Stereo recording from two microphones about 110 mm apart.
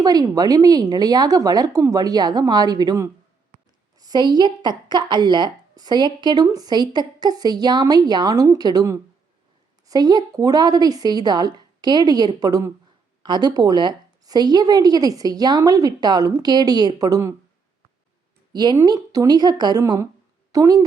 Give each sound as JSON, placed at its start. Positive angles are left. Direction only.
{"t": 0.0, "sound": "a woman's voice", "side_deg": -35}
{"t": 18.5, "sound": "a woman's voice", "side_deg": -40}
{"t": 19.8, "sound": "a woman's voice", "side_deg": -25}